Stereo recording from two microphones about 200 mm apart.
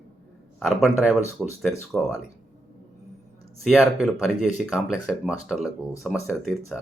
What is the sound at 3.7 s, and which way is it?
Speech, centre (ahead or behind).